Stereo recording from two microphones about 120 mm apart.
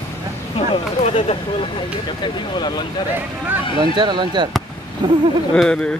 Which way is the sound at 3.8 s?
40° right (ahead or behind).